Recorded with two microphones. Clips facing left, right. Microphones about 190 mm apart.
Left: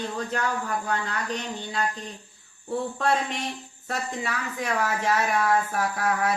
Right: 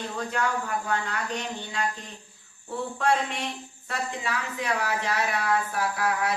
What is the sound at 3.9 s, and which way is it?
Speech, 45° left (ahead or behind).